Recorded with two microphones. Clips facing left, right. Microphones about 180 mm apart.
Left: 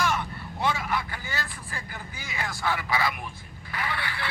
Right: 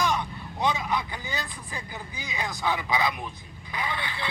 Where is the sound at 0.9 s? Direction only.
15° right (ahead or behind).